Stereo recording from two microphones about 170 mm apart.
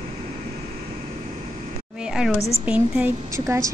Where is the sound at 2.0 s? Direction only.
5° right (ahead or behind).